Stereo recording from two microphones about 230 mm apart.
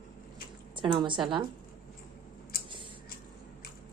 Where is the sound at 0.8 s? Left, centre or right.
Right.